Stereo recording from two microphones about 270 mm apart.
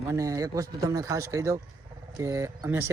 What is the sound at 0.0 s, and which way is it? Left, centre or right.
Speech, centre.